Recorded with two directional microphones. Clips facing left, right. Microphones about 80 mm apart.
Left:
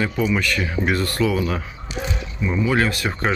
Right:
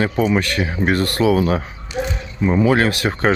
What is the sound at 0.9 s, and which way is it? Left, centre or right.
Speech, right.